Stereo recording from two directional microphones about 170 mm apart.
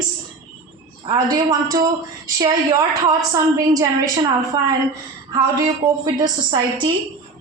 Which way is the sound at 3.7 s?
20° right (ahead or behind).